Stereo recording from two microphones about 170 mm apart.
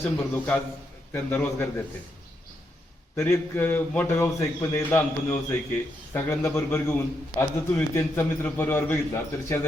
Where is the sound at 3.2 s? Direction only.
15° left (ahead or behind).